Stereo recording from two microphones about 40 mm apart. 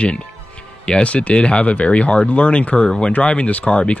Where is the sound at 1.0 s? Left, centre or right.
Left.